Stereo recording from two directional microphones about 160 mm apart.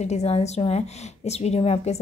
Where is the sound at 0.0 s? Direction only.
45° left (ahead or behind).